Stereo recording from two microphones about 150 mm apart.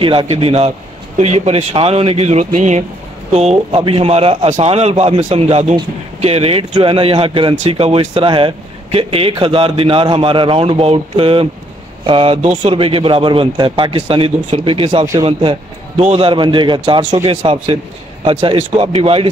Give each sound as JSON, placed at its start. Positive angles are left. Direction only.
{"t": 0.0, "sound": "a man's voice", "side_deg": -35}